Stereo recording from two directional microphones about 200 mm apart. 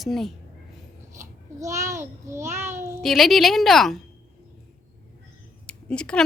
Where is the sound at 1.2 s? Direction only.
15° right (ahead or behind).